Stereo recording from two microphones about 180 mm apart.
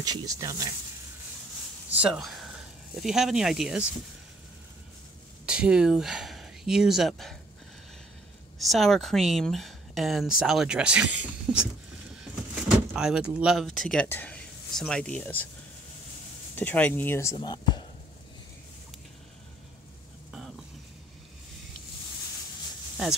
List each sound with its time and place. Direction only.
0.0 s speech: 20° right (ahead or behind)
2.0 s speech: 5° right (ahead or behind)
5.5 s speech: 5° right (ahead or behind)
8.5 s speech: centre (ahead or behind)
12.6 s speech: 5° right (ahead or behind)
16.5 s speech: 10° left (ahead or behind); by 17.8 s 25° left (ahead or behind)